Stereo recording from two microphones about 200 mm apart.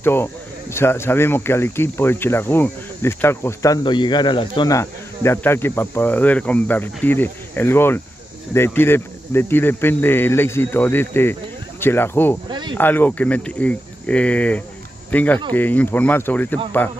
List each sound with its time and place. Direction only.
0.0 s speech: 10° left (ahead or behind)
12.4 s a sound: 20° right (ahead or behind)
12.7 s speech: 10° left (ahead or behind)